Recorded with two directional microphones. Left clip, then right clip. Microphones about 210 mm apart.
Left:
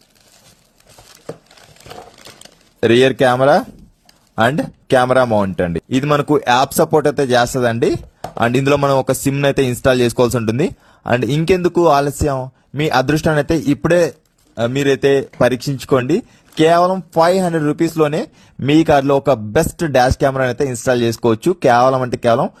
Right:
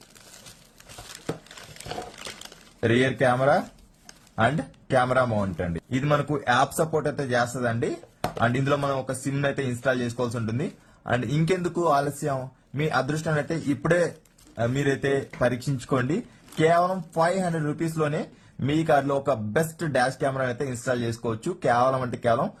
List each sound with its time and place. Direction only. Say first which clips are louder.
2.8 s speech: left 10 dB; 45° left (ahead or behind)
14.5 s speech: left 10 dB; 40° left (ahead or behind)